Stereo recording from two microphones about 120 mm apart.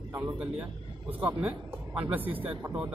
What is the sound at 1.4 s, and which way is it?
A man's voice, 15° right (ahead or behind).